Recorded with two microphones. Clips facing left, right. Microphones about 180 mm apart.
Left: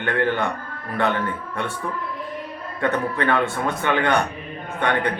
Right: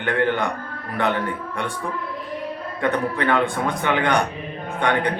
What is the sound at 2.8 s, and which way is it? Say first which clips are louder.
Speech: even; 15° right (ahead or behind).